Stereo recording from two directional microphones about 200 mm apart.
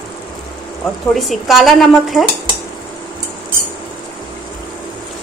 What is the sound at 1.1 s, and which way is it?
Speech, centre (ahead or behind).